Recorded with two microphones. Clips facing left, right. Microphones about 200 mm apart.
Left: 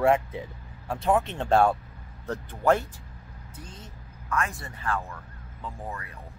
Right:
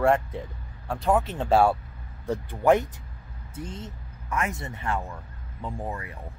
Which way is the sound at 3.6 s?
25° right (ahead or behind).